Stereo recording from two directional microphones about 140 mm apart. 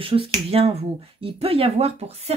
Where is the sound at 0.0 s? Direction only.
40° right (ahead or behind).